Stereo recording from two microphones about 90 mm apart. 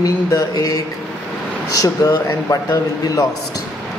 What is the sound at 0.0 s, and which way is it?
Speech, 40° left (ahead or behind).